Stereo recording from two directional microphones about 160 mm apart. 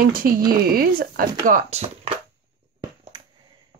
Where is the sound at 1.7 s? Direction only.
40° right (ahead or behind).